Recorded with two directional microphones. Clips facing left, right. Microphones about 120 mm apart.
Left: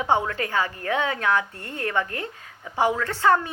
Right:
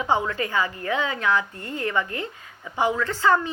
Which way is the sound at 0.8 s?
60° left (ahead or behind).